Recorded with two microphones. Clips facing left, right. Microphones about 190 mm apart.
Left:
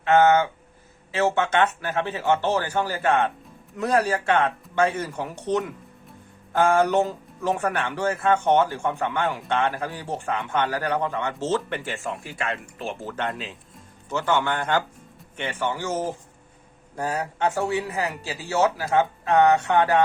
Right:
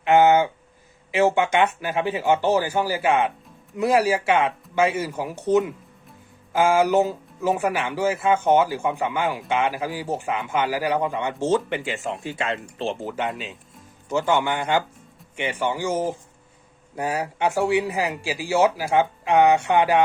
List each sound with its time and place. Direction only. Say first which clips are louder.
0.0 s speech: right 1 dB; 15° right (ahead or behind)
13.1 s speech: right 2 dB; 5° right (ahead or behind)
14.1 s speech: right 2 dB; 15° right (ahead or behind)